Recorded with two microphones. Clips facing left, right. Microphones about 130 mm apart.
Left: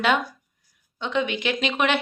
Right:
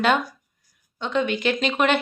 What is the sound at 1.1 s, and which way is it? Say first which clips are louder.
Speech: right 2 dB; 45° right (ahead or behind).